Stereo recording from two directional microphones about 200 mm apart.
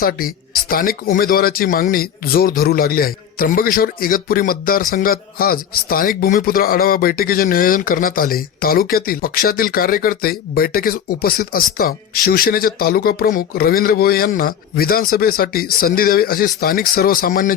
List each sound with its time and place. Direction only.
0.0 s speech: 45° left (ahead or behind)